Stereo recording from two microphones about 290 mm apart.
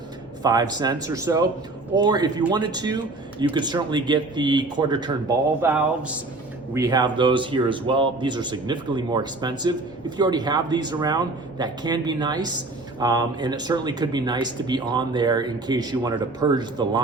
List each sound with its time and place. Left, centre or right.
0.4 s speech: centre